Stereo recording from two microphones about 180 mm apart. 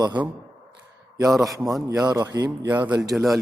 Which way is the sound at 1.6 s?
Centre (ahead or behind).